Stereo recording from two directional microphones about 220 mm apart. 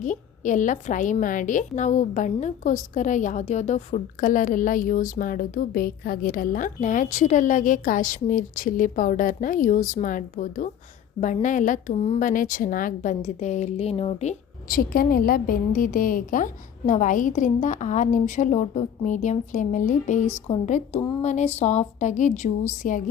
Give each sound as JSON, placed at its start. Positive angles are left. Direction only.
{"t": 0.0, "sound": "a woman's voice", "side_deg": 35}